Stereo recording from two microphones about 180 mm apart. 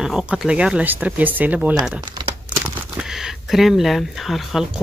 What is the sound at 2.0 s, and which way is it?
Crumpling, 20° right (ahead or behind).